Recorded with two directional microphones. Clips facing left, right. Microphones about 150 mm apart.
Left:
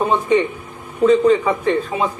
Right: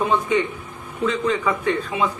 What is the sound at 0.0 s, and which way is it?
A man's voice, 35° left (ahead or behind).